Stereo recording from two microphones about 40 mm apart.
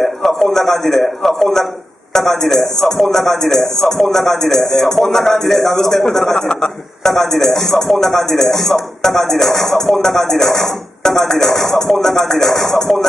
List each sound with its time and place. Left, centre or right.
0.0 s a man's voice: centre